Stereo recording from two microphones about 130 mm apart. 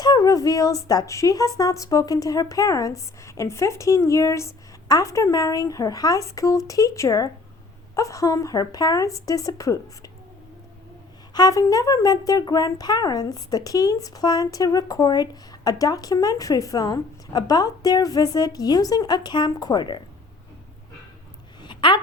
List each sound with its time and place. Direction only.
0.0 s speech: 30° left (ahead or behind)
11.3 s speech: 30° left (ahead or behind)
21.6 s a sound: 40° left (ahead or behind)